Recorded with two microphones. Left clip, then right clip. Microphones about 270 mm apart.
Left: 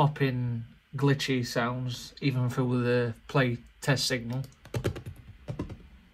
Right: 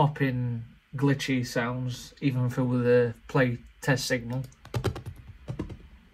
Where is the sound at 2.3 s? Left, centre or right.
Left.